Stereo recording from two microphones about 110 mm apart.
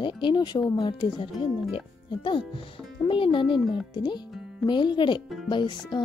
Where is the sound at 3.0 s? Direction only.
50° left (ahead or behind).